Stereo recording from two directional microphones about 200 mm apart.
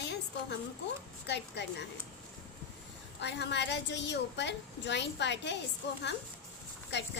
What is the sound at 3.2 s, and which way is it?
A woman's voice, 60° left (ahead or behind).